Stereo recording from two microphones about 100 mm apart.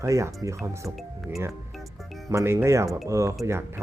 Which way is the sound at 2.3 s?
25° right (ahead or behind).